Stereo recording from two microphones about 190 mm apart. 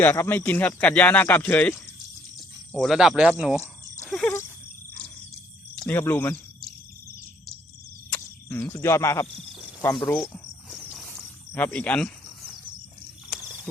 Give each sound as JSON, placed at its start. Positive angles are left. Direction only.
{"t": 0.0, "sound": "speech", "side_deg": 10}
{"t": 4.1, "sound": "a sound", "side_deg": 5}
{"t": 5.7, "sound": "cricket", "side_deg": 5}
{"t": 6.0, "sound": "speech", "side_deg": 10}
{"t": 8.1, "sound": "speech", "side_deg": 10}
{"t": 10.2, "sound": "cricket", "side_deg": 0}
{"t": 13.3, "sound": "a sound", "side_deg": 0}